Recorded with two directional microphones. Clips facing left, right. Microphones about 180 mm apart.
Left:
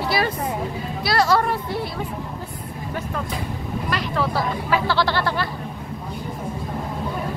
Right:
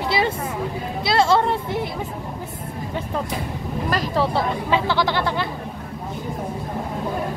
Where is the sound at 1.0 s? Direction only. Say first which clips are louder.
Right 1 dB; 25° right (ahead or behind).